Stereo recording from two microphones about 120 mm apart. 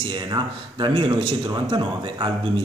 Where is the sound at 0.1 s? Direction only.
40° right (ahead or behind).